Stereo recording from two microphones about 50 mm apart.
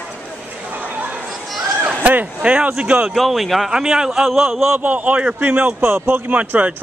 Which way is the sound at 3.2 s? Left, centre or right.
Centre.